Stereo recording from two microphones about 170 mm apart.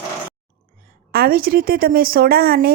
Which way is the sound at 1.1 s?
60° right (ahead or behind).